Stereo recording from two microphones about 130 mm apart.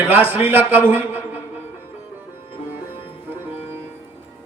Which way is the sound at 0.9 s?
15° right (ahead or behind).